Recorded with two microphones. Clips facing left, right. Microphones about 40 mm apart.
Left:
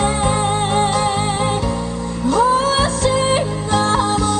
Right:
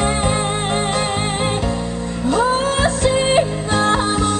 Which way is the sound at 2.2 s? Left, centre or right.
Right.